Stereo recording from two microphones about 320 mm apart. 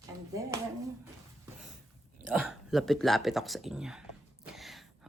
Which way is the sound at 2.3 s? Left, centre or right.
Centre.